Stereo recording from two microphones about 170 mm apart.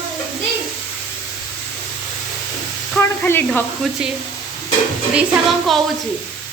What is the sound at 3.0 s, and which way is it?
Sizzle, 10° left (ahead or behind).